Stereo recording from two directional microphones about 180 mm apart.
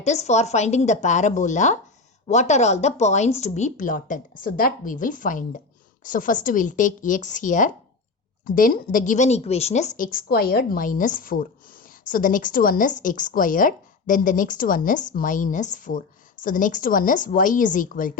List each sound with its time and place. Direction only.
0.0 s a woman's voice: 40° left (ahead or behind)